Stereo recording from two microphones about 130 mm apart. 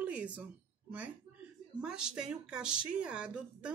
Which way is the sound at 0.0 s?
10° right (ahead or behind).